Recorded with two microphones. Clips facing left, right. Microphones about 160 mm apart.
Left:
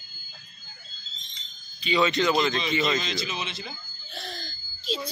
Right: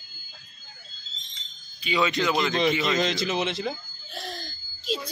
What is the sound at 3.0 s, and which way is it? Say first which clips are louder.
Speech: right 7 dB; 65° right (ahead or behind).